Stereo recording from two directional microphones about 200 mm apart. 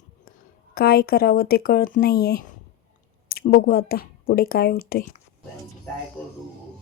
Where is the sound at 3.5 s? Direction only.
50° left (ahead or behind).